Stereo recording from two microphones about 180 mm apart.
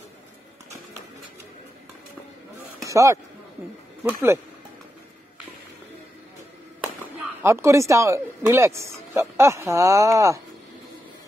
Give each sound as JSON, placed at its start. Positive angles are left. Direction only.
{"t": 2.8, "sound": "a sound", "side_deg": -15}
{"t": 4.0, "sound": "speech", "side_deg": -15}
{"t": 7.4, "sound": "speech", "side_deg": -15}